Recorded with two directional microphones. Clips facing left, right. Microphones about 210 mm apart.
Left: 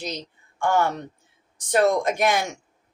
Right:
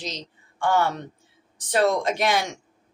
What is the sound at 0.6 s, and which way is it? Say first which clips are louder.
A woman's voice: even; 45° left (ahead or behind).